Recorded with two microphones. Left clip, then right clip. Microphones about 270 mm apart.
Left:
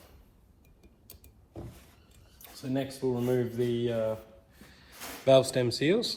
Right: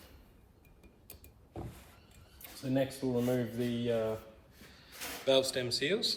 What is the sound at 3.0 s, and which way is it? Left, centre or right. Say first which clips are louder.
Speech: left 4 dB; left.